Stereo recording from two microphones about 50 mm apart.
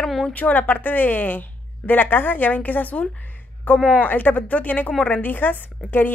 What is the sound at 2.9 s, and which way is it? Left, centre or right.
Speech, left.